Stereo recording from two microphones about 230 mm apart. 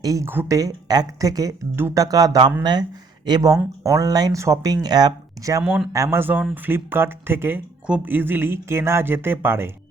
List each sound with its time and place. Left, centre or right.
0.0 s speech: centre